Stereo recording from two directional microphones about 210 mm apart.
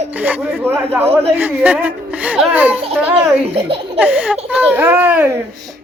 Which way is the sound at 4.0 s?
5° right (ahead or behind).